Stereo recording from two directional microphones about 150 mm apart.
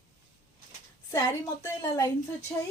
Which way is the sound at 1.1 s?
25° left (ahead or behind).